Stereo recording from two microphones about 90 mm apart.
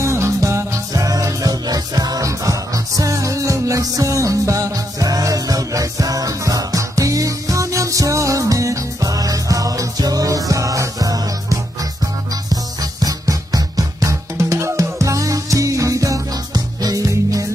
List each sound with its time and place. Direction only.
0.0 s music: 35° right (ahead or behind)
13.0 s music: 45° right (ahead or behind)